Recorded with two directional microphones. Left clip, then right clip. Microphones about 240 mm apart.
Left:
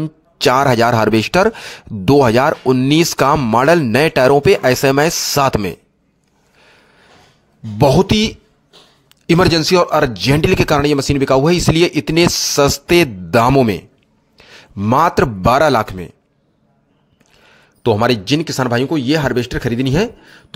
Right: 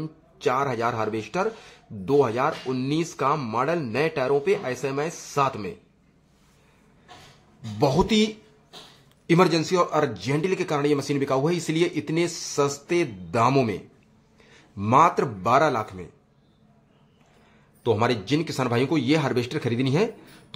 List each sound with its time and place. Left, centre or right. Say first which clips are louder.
0.0 s speech: left 11 dB; left
7.8 s speech: left 9 dB; left
17.8 s speech: left 9 dB; left